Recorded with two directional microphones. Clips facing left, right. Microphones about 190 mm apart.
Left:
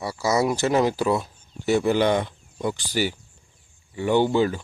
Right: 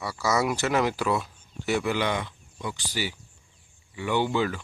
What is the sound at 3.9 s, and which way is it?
Speech, 40° left (ahead or behind).